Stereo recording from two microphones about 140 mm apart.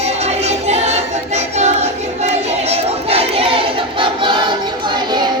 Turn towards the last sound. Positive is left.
turn(degrees=-30)  # may be behind; listen again after turning